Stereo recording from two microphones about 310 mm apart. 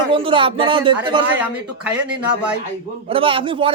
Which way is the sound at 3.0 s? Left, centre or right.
Centre.